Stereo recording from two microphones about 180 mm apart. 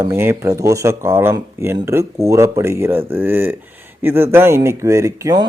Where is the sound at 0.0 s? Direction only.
15° right (ahead or behind).